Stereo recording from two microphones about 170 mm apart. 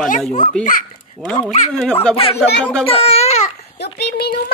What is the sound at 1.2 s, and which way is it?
Speech, centre (ahead or behind).